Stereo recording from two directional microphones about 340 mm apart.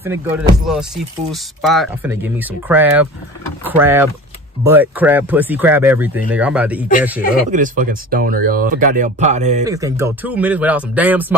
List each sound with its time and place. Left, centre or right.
0.0 s music: centre
1.3 s speech: centre
3.6 s music: centre
4.6 s speech: centre
7.5 s speech: right
9.7 s speech: centre